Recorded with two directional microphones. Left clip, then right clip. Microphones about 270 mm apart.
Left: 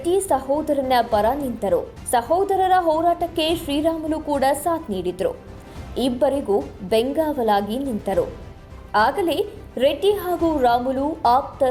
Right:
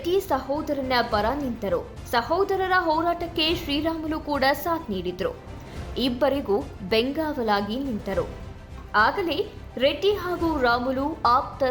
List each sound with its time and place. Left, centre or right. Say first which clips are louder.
0.3 s a woman's voice: left 6 dB; centre